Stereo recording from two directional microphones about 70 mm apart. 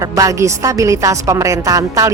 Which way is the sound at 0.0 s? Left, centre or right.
Right.